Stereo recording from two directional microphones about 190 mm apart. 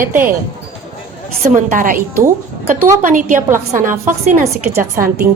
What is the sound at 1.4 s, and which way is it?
Speech, 45° right (ahead or behind).